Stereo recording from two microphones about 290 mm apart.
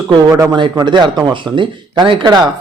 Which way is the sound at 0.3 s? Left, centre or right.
Centre.